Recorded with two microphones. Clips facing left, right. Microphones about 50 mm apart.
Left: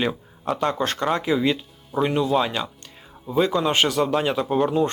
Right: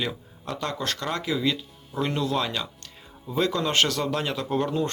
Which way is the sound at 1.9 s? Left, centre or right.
Centre.